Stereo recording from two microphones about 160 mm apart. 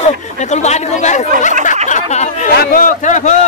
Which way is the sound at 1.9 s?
45° left (ahead or behind).